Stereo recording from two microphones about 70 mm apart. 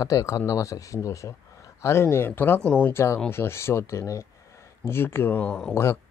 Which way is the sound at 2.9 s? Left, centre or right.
Left.